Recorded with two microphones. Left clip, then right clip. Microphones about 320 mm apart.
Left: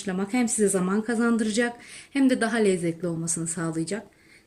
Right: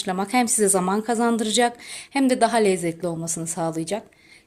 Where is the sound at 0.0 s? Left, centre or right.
Centre.